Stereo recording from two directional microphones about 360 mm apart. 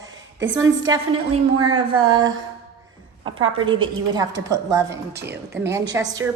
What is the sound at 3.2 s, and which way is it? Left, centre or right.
A woman's voice, centre.